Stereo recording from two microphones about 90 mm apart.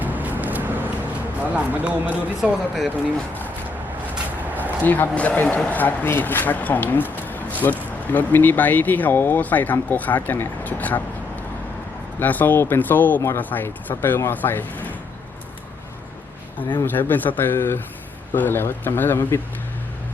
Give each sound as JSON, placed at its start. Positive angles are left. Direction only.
{"t": 0.0, "sound": "vehicle", "side_deg": -20}
{"t": 1.4, "sound": "speech", "side_deg": -15}
{"t": 2.4, "sound": "speech", "side_deg": 0}
{"t": 4.8, "sound": "speech", "side_deg": 20}
{"t": 12.2, "sound": "speech", "side_deg": 20}
{"t": 16.8, "sound": "speech", "side_deg": 20}